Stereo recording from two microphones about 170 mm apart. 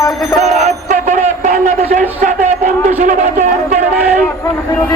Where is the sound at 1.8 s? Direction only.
45° right (ahead or behind).